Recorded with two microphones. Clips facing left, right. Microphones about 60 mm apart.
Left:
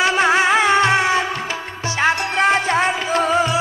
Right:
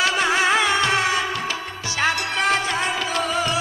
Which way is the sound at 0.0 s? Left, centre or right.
Left.